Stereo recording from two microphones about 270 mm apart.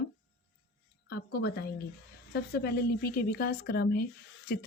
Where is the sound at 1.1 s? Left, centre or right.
Left.